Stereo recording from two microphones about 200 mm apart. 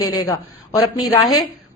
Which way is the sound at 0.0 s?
20° left (ahead or behind).